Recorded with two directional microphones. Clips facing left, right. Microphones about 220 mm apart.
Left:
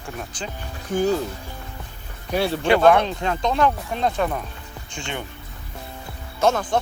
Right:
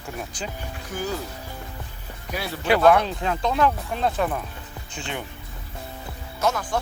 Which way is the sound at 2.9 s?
5° right (ahead or behind).